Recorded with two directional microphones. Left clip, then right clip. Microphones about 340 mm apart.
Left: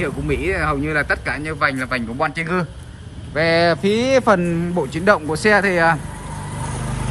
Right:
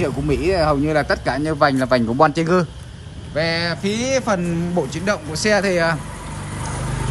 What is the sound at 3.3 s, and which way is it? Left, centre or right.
A man's voice, centre.